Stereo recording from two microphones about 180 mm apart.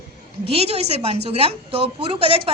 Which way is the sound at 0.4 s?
35° right (ahead or behind).